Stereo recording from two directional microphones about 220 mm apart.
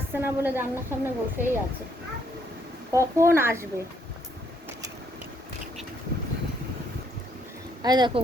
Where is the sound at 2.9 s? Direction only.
15° right (ahead or behind).